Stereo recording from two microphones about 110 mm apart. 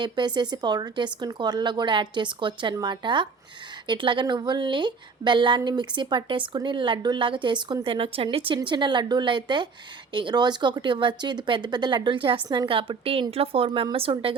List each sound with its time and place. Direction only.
0.0 s a woman's voice: 45° right (ahead or behind)